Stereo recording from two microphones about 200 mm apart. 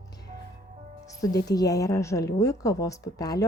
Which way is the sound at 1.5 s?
20° left (ahead or behind).